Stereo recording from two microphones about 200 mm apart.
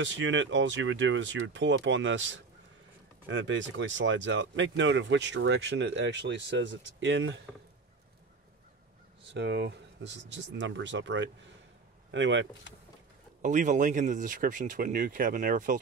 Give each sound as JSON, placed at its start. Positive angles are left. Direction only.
{"t": 0.0, "sound": "speech", "side_deg": -65}
{"t": 9.3, "sound": "speech", "side_deg": -60}
{"t": 13.4, "sound": "speech", "side_deg": -40}